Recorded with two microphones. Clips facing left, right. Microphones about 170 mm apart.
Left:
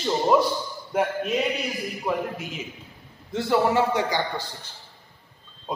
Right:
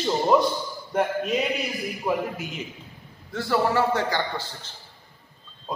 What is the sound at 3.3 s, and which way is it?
Speech, 20° left (ahead or behind).